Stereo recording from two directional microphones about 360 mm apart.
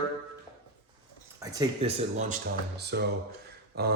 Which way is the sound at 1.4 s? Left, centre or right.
Centre.